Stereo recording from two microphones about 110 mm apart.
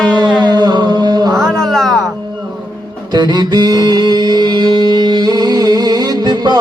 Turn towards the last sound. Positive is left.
turn(degrees=-40)  # may be behind; listen again after turning